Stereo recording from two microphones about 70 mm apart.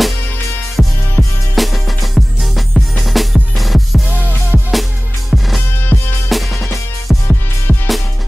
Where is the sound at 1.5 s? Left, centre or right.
Centre.